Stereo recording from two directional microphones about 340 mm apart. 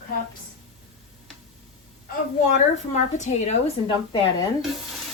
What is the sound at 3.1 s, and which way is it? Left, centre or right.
Speech, left.